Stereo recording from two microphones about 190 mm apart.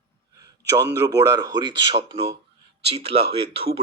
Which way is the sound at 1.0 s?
20° right (ahead or behind).